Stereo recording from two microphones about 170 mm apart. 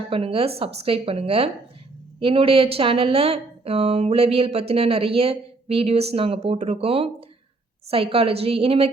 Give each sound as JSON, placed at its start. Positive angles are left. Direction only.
{"t": 0.1, "sound": "speech", "side_deg": -35}